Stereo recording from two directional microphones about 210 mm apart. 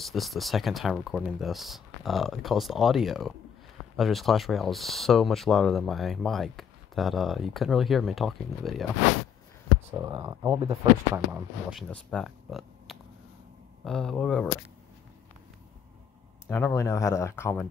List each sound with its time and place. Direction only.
0.0 s speech: centre (ahead or behind)
9.8 s speech: 15° right (ahead or behind)
11.9 s speech: 5° left (ahead or behind)
16.4 s speech: 10° left (ahead or behind)